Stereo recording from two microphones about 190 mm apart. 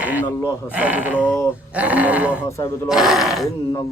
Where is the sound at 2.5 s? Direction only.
15° left (ahead or behind).